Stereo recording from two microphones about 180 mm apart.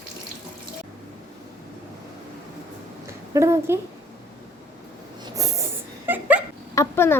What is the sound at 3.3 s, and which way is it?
Speech, 15° right (ahead or behind).